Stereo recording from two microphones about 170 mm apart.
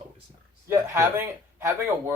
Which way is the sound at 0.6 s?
15° right (ahead or behind).